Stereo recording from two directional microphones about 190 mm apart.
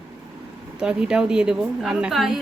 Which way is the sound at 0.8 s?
5° right (ahead or behind).